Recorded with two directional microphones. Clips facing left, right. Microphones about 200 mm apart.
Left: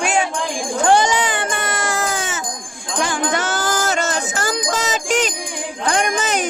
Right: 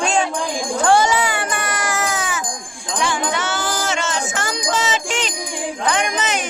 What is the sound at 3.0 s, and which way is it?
Music, 45° left (ahead or behind).